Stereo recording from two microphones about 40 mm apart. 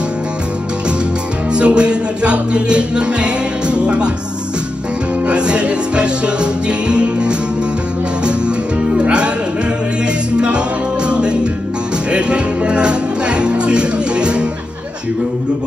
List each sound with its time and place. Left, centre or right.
1.5 s music: right
5.3 s music: right
8.9 s music: right
11.1 s music: right